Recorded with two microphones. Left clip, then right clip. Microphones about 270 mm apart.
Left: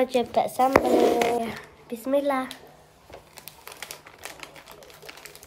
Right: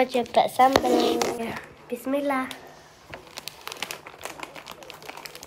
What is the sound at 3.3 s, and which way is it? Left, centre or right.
Crumpling, right.